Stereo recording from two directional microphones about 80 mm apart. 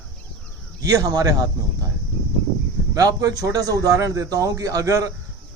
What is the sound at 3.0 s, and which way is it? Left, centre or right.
Speech, right.